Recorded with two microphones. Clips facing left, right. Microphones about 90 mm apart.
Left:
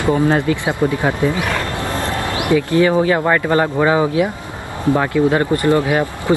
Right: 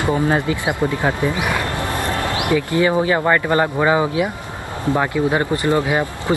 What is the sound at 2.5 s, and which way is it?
Speech, 15° right (ahead or behind).